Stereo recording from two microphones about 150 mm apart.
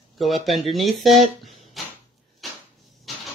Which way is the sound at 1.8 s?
Centre (ahead or behind).